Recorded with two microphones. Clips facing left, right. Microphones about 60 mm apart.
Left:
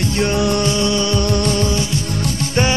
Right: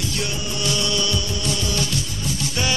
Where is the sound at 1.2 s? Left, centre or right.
Left.